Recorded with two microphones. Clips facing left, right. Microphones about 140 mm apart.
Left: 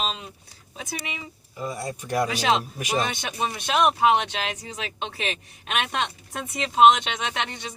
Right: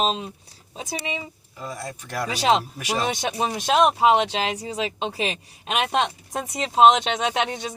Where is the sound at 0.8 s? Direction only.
25° right (ahead or behind).